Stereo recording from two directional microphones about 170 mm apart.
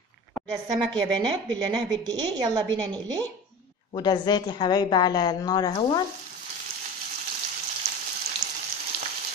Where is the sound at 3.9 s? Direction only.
25° left (ahead or behind).